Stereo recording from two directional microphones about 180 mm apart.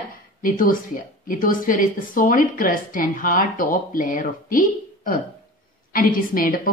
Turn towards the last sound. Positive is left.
turn(degrees=50)  # may be behind; listen again after turning